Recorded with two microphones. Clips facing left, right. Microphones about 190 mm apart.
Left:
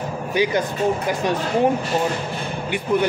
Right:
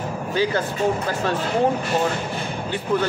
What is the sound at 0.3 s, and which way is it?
Speech, 15° left (ahead or behind).